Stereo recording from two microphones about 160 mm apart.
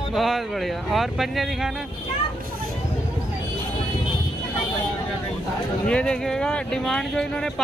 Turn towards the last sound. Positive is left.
turn(degrees=0)  # may be behind; listen again after turning